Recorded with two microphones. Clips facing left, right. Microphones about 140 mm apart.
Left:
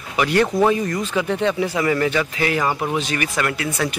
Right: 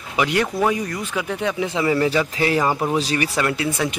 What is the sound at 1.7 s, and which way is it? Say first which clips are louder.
Speech: even; 20° right (ahead or behind).